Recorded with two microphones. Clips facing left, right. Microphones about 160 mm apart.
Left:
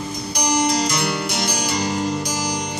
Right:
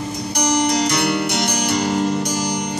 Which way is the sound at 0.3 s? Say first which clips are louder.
Right 2 dB; 65° right (ahead or behind).